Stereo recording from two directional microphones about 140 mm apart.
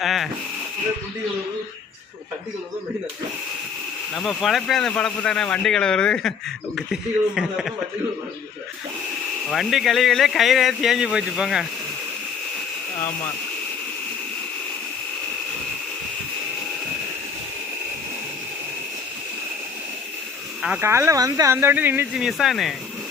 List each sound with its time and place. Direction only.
0.0 s a sound: centre (ahead or behind)
4.1 s speech: centre (ahead or behind)
9.5 s speech: centre (ahead or behind)
20.6 s speech: 5° right (ahead or behind)
20.8 s speech: 20° right (ahead or behind)
22.1 s speech: 5° right (ahead or behind)